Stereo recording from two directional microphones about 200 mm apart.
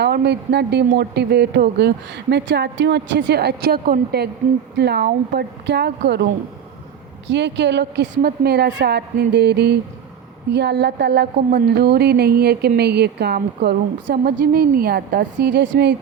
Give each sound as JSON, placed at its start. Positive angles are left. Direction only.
{"t": 0.0, "sound": "speech", "side_deg": -55}
{"t": 7.3, "sound": "speech", "side_deg": -60}